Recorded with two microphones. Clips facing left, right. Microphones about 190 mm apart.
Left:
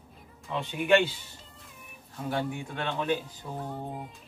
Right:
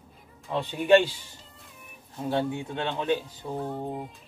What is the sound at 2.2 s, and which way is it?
A man's voice, 25° right (ahead or behind).